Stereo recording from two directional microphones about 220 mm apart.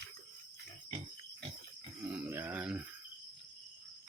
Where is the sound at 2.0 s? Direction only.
5° right (ahead or behind).